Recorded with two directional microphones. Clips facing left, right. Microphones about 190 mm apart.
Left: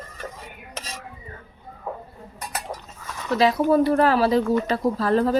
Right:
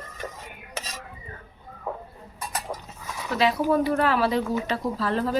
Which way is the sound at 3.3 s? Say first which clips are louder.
Left 4 dB; 40° left (ahead or behind).